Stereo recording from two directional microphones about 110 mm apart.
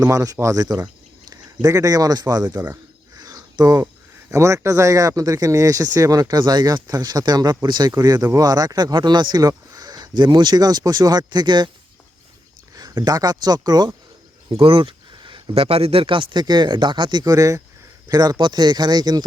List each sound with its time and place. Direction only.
0.0 s speech: 30° right (ahead or behind)
3.2 s cricket: 35° right (ahead or behind)
4.3 s speech: 25° right (ahead or behind)
12.7 s a sound: 35° right (ahead or behind)
13.4 s speech: 35° right (ahead or behind)
14.6 s speech: 50° right (ahead or behind)